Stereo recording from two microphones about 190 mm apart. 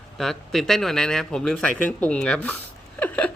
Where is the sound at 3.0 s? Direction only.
10° left (ahead or behind).